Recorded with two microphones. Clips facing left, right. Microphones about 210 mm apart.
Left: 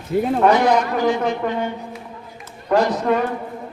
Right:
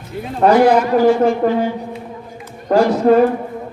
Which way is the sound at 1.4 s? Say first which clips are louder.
Right 7 dB; 35° right (ahead or behind).